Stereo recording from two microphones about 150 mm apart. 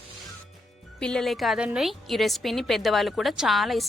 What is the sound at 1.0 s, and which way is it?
A woman's voice, 5° left (ahead or behind).